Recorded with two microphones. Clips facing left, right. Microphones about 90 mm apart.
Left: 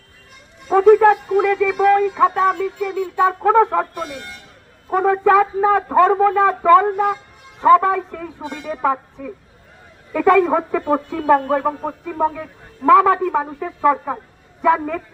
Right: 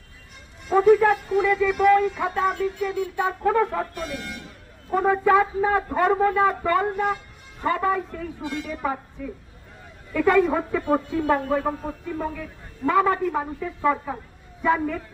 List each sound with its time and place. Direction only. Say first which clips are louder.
0.9 s speech: left 7 dB; 80° left
1.8 s speech: left 3 dB; 50° left (ahead or behind)
2.2 s speech: left 7 dB; 90° left
3.4 s speech: left 6 dB; 70° left (ahead or behind)
4.9 s a man's voice: left 4 dB; 55° left (ahead or behind)
10.1 s a woman's voice: left 5 dB; 90° left
10.4 s speech: left 5 dB; 65° left (ahead or behind)
12.8 s a man's voice: left 8 dB; 80° left; by 15.0 s 60° left (ahead or behind)